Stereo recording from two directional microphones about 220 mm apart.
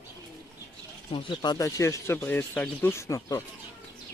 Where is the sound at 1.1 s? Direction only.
20° left (ahead or behind).